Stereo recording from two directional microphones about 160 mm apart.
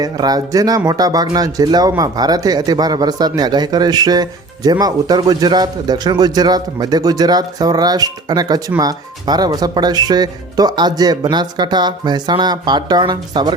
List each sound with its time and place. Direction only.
0.0 s speech: 25° right (ahead or behind)